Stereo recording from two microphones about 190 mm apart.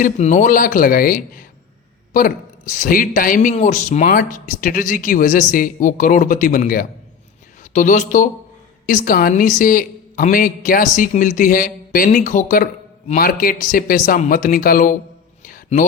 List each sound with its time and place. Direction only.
0.0 s a woman's voice: 40° left (ahead or behind)
15.4 s music: 45° left (ahead or behind)